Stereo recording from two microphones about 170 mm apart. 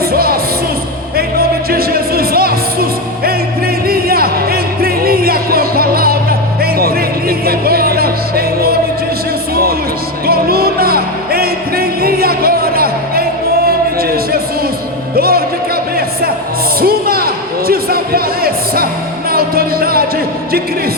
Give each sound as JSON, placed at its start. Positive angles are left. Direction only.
{"t": 0.1, "sound": "music", "side_deg": -60}
{"t": 3.8, "sound": "music", "side_deg": -60}
{"t": 10.2, "sound": "music", "side_deg": -60}
{"t": 15.1, "sound": "music", "side_deg": -60}
{"t": 16.8, "sound": "a sound", "side_deg": -60}
{"t": 19.3, "sound": "music", "side_deg": -60}